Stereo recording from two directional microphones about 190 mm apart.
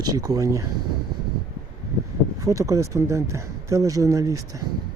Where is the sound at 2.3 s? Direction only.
15° right (ahead or behind).